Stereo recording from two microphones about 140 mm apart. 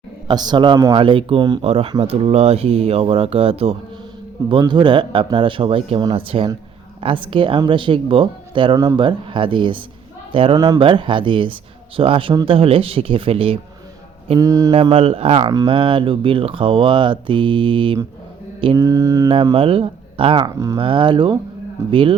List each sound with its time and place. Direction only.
0.3 s speech: 30° right (ahead or behind)
14.3 s mantra: 25° right (ahead or behind)
14.7 s speech: 40° right (ahead or behind)
18.8 s mantra: 25° right (ahead or behind)
19.5 s speech: 40° right (ahead or behind)